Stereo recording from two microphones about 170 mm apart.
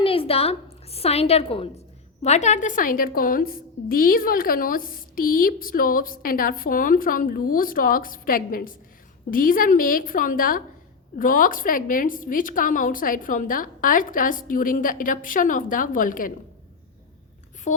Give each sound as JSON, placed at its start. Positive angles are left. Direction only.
{"t": 0.0, "sound": "a woman's voice", "side_deg": 30}
{"t": 17.7, "sound": "speech", "side_deg": 45}